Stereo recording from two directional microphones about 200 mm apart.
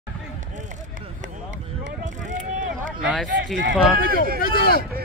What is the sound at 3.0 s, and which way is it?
Speech, 5° right (ahead or behind).